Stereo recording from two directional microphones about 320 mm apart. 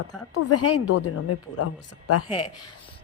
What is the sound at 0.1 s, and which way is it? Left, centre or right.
Speech, left.